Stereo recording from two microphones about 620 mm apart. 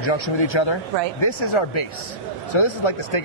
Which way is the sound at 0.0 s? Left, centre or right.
Left.